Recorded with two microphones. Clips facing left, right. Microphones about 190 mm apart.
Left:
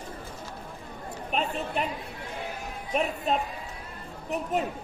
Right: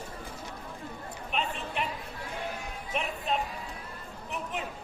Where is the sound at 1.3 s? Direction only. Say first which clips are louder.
Left 4 dB; 40° left (ahead or behind).